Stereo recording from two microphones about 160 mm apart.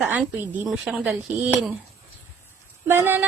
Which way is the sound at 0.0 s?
10° right (ahead or behind).